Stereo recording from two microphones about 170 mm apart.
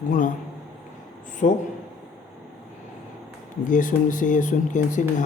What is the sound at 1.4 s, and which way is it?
Speech, 45° left (ahead or behind).